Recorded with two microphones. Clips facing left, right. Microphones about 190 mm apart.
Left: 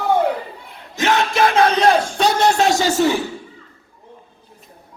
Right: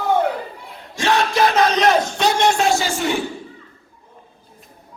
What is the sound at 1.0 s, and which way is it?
Speech, 25° left (ahead or behind).